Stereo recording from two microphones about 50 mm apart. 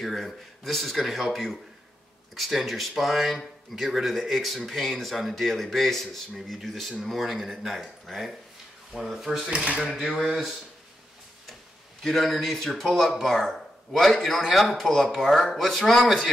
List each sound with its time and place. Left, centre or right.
0.0 s speech: centre
9.7 s speech: centre
10.1 s speech: centre
12.0 s speech: centre